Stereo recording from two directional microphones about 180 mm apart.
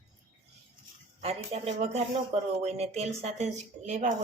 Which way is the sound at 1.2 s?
35° right (ahead or behind).